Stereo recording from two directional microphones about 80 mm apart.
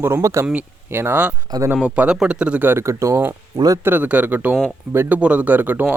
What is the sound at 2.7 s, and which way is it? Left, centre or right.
Speech, right.